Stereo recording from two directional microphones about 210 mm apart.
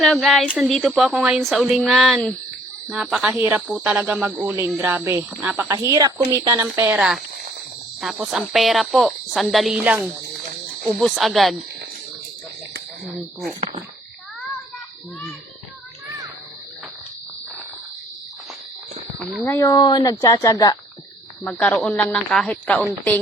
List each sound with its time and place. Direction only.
0.0 s speech: centre (ahead or behind)
13.5 s speech: 20° right (ahead or behind)
19.5 s speech: 15° left (ahead or behind)